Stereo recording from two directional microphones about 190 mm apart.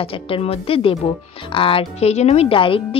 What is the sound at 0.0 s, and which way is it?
Speech, 30° left (ahead or behind).